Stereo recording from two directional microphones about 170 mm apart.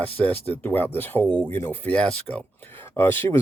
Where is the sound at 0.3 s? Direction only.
10° left (ahead or behind).